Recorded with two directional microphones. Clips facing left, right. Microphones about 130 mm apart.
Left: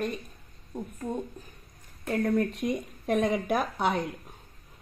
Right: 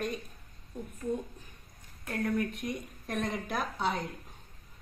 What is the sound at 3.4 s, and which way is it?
Speech, 60° left (ahead or behind).